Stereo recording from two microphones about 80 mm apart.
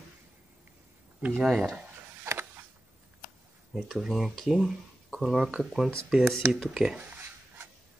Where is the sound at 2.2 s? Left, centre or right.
Right.